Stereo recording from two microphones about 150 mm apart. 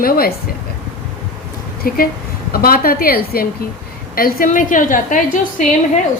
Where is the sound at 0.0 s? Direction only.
80° left.